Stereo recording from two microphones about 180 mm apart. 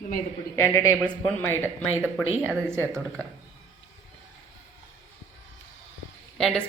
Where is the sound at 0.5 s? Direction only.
15° left (ahead or behind).